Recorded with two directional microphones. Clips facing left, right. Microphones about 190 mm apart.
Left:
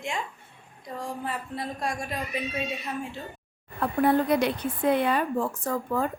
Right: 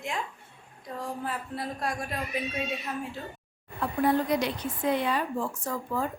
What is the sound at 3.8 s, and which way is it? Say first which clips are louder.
A woman's voice: left 3 dB; 60° left (ahead or behind).